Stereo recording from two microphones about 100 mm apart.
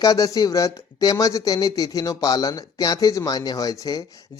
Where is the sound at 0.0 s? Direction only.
40° left (ahead or behind).